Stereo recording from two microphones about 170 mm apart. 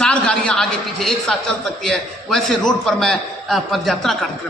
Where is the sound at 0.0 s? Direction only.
5° left (ahead or behind).